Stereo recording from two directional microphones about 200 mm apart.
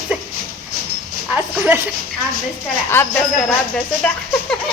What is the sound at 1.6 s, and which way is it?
Speech, 10° right (ahead or behind).